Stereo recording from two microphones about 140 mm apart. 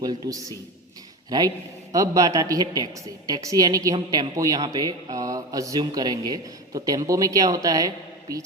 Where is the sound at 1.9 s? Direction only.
25° right (ahead or behind).